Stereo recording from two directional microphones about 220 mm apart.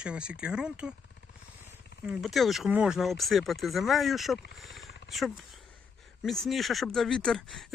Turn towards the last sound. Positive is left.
turn(degrees=0)  # may be behind; listen again after turning